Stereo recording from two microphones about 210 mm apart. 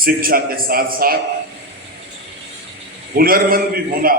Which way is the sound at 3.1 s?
45° right (ahead or behind).